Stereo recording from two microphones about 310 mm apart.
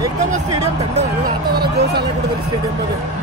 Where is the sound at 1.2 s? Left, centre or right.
Right.